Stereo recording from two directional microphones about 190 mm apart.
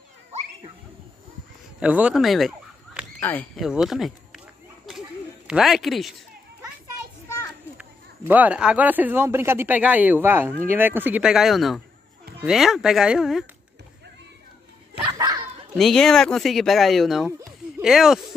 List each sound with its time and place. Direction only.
0.3 s children playing: 35° right (ahead or behind)
1.8 s a sound: 5° right (ahead or behind)
3.2 s speech: 10° left (ahead or behind)
3.6 s speech: centre (ahead or behind)
5.5 s speech: centre (ahead or behind)
7.2 s children playing: 15° left (ahead or behind)
8.3 s speech: 10° right (ahead or behind)
15.0 s dog: 20° right (ahead or behind)
15.7 s speech: centre (ahead or behind)